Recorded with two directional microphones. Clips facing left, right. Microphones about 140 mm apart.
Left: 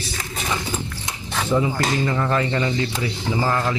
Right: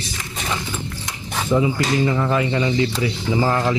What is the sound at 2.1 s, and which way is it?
Speech, 10° right (ahead or behind).